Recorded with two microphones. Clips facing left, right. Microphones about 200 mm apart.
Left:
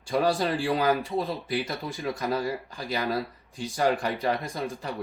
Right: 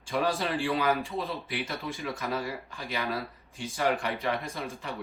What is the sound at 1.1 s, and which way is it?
Speech, 15° left (ahead or behind).